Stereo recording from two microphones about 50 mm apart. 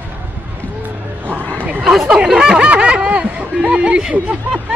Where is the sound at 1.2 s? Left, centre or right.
Right.